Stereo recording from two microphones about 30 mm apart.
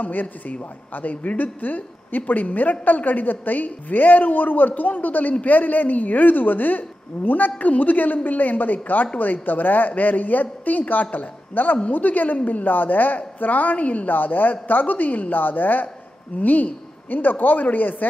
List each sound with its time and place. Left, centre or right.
0.0 s a woman's voice: left
9.2 s a woman's voice: left
11.9 s a woman's voice: left
12.6 s a woman's voice: left
14.0 s a woman's voice: left
16.3 s a woman's voice: left
17.1 s a woman's voice: left